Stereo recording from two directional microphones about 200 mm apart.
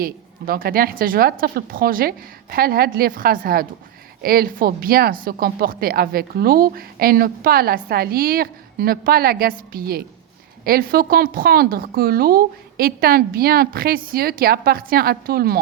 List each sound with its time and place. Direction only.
0.0 s speech: 45° right (ahead or behind)